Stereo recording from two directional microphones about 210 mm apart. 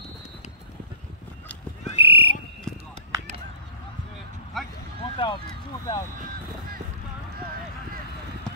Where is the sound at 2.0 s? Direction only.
25° left (ahead or behind).